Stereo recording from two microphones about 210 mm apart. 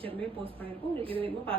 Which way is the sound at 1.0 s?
25° right (ahead or behind).